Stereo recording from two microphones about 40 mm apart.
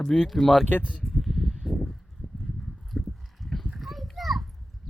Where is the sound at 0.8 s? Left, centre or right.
Left.